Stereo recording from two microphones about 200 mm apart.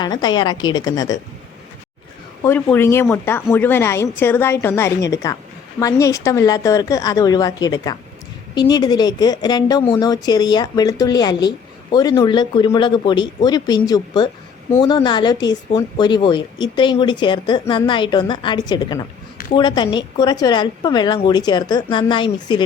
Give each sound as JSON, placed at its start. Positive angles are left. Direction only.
{"t": 0.0, "sound": "speech", "side_deg": 20}
{"t": 2.4, "sound": "a woman's voice", "side_deg": 10}